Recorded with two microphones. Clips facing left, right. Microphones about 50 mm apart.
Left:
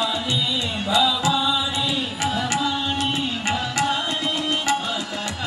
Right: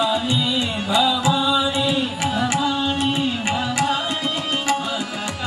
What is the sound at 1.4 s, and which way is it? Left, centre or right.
Chant, centre.